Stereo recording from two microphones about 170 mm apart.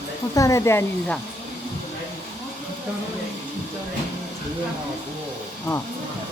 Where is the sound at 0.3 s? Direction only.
20° left (ahead or behind).